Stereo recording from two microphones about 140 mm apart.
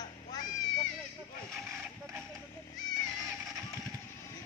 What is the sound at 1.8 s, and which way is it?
Music, 15° right (ahead or behind).